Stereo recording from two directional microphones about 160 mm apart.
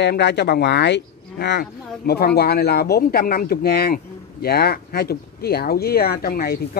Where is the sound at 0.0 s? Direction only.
90° left.